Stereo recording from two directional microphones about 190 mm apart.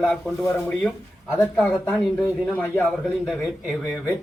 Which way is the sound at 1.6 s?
5° left (ahead or behind).